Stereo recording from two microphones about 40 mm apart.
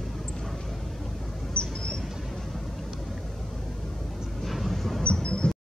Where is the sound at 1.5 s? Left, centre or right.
Left.